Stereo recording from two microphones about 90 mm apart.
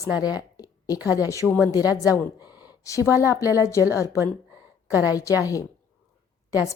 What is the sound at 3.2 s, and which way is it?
A woman's voice, 35° left (ahead or behind).